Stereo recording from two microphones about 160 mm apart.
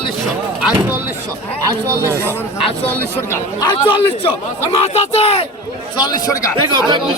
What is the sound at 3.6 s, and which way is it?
Speech, 30° left (ahead or behind).